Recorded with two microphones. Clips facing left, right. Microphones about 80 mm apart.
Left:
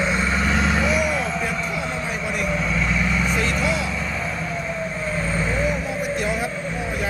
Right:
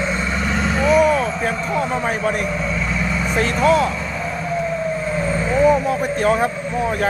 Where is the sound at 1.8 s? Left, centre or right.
Right.